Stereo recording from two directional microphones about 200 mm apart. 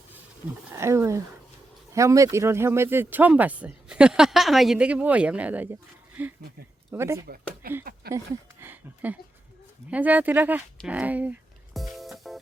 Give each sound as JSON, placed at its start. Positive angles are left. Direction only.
{"t": 0.7, "sound": "speech", "side_deg": -15}
{"t": 7.6, "sound": "speech", "side_deg": -45}
{"t": 8.6, "sound": "speech", "side_deg": -10}
{"t": 10.8, "sound": "music", "side_deg": -5}